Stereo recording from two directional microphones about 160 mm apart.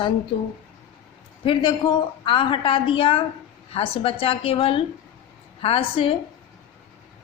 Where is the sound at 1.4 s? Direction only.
30° left (ahead or behind).